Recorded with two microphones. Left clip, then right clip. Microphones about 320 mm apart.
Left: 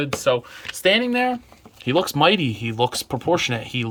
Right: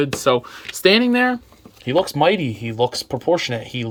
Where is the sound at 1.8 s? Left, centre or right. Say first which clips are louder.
Right 2 dB; centre.